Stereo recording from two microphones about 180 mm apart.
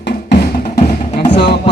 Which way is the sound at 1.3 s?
30° left (ahead or behind).